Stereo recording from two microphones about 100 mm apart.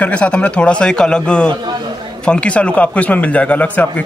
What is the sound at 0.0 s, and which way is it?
A man's voice, 10° left (ahead or behind).